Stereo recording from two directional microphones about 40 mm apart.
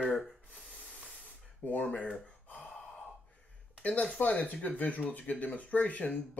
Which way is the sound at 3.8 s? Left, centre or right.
Left.